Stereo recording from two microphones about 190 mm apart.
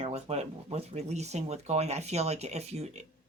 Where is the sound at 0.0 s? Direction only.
35° right (ahead or behind).